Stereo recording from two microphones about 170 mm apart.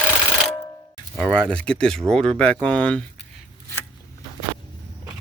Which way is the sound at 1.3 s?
5° left (ahead or behind).